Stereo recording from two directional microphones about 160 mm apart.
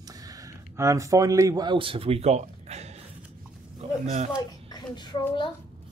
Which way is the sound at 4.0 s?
45° right (ahead or behind).